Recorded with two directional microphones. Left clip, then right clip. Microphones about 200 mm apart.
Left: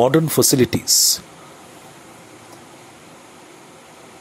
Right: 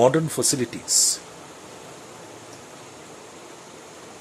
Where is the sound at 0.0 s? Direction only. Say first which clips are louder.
Left 4 dB; 30° left (ahead or behind).